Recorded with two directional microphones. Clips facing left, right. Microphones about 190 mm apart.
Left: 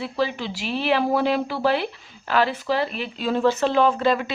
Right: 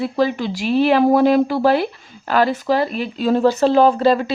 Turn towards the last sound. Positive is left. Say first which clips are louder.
# right 6 dB
turn(degrees=-35)  # may be behind; listen again after turning